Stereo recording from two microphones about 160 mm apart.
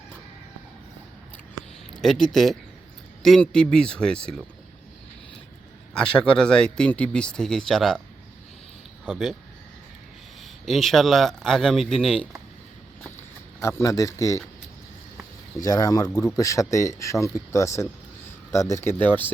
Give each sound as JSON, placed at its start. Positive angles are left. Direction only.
{"t": 1.9, "sound": "speech", "side_deg": 0}
{"t": 5.9, "sound": "speech", "side_deg": 5}
{"t": 9.0, "sound": "speech", "side_deg": 0}
{"t": 10.7, "sound": "speech", "side_deg": 0}
{"t": 13.6, "sound": "speech", "side_deg": 15}
{"t": 15.6, "sound": "speech", "side_deg": 25}